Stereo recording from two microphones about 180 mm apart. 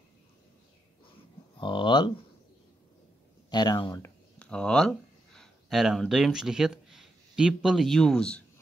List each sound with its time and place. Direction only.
1.6 s speech: 25° left (ahead or behind)
3.4 s speech: 25° left (ahead or behind)
4.4 s speech: 5° left (ahead or behind)